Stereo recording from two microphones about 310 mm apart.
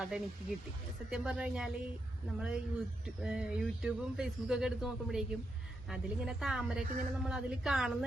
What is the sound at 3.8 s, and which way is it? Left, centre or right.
A woman's voice, centre.